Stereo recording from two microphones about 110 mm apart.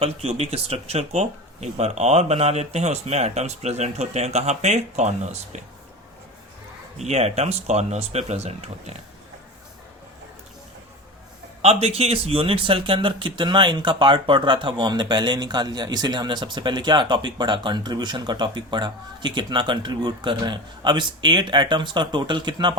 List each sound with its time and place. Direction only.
0.0 s speech: 70° right (ahead or behind); by 5.5 s 90° right
7.0 s speech: 75° right (ahead or behind)
11.6 s speech: 65° right (ahead or behind); by 22.7 s 45° right (ahead or behind)